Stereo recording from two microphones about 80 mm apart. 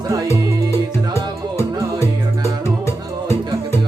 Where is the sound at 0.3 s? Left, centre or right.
Left.